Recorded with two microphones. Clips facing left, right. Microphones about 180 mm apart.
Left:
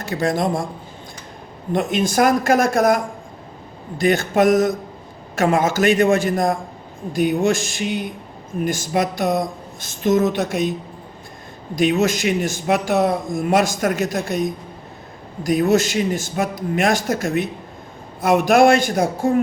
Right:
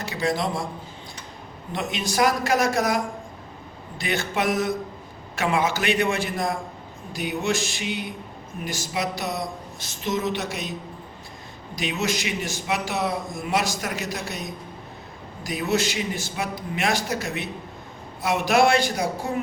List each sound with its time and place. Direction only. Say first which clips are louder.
0.0 s speech: left 5 dB; 50° left (ahead or behind)
1.7 s speech: left 8 dB; 50° left (ahead or behind)